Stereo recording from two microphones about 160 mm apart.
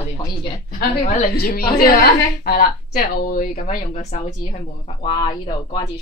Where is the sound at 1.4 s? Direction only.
70° left (ahead or behind).